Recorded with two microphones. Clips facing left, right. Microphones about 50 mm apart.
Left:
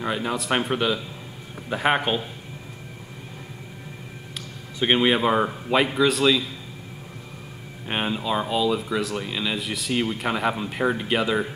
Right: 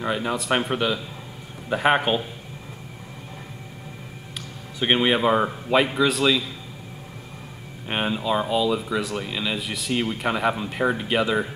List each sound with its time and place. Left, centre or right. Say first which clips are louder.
0.0 s speech: right 1 dB; centre
4.7 s speech: even; centre
7.9 s speech: right 1 dB; centre